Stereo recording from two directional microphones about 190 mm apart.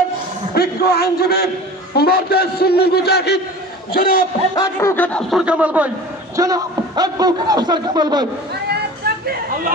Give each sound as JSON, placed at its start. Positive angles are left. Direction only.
{"t": 0.6, "sound": "a man's voice", "side_deg": 55}
{"t": 4.6, "sound": "music", "side_deg": 10}
{"t": 5.4, "sound": "a man's voice", "side_deg": -5}
{"t": 6.3, "sound": "a man's voice", "side_deg": -20}
{"t": 9.0, "sound": "a sound", "side_deg": -55}